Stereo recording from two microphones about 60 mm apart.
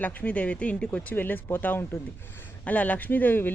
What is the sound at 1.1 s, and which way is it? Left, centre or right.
A woman's voice, left.